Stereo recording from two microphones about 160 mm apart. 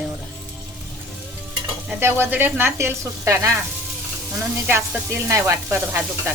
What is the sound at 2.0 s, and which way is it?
Speech, 15° right (ahead or behind).